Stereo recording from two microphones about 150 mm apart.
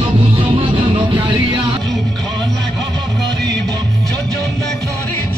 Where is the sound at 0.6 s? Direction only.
35° right (ahead or behind).